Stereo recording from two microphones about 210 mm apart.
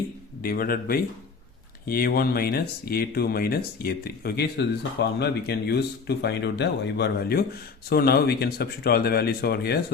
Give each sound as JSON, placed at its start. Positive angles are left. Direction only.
{"t": 0.4, "sound": "speech", "side_deg": 45}